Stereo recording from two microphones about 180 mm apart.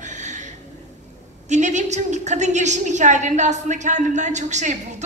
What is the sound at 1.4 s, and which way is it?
A woman's voice, 40° right (ahead or behind).